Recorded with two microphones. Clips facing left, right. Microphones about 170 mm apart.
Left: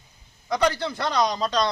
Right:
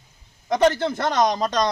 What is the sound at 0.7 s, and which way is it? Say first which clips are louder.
Speech: right 4 dB; 50° right (ahead or behind).